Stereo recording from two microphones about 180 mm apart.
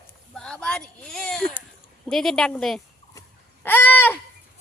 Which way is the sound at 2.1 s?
Centre (ahead or behind).